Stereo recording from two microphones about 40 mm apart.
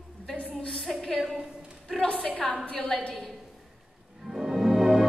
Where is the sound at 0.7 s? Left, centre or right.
Centre.